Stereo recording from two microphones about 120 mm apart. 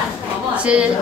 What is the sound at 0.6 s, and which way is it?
Speech, 10° right (ahead or behind).